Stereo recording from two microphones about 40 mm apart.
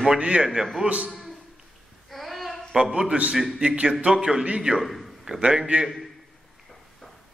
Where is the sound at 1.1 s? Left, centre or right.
Centre.